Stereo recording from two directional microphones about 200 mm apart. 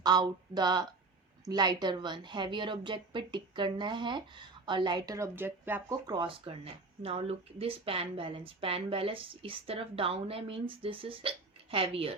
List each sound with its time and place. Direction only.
0.0 s a woman's voice: 20° right (ahead or behind)